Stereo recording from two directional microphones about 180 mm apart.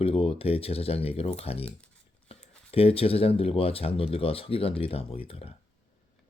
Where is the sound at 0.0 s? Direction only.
30° left (ahead or behind).